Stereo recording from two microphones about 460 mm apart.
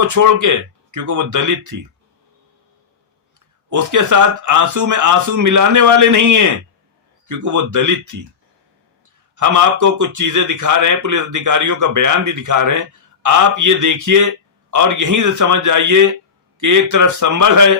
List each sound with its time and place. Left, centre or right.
0.0 s a man's voice: right
3.7 s a man's voice: right
9.3 s a man's voice: right